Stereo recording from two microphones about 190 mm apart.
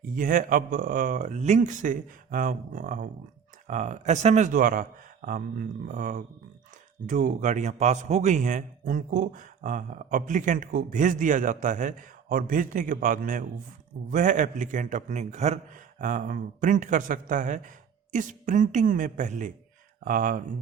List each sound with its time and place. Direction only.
0.0 s a man's voice: 45° right (ahead or behind)